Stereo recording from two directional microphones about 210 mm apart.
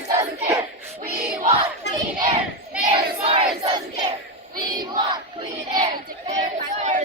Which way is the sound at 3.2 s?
30° right (ahead or behind).